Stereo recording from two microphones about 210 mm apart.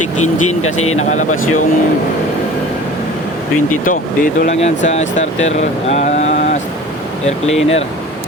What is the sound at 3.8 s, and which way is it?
Speech, 40° left (ahead or behind).